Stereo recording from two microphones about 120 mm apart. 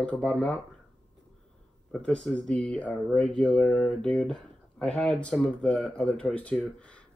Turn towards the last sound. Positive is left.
turn(degrees=10)  # may be behind; listen again after turning